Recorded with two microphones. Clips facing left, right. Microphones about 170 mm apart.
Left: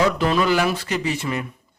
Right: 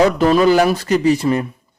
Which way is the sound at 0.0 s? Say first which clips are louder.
Right 7 dB; 45° right (ahead or behind).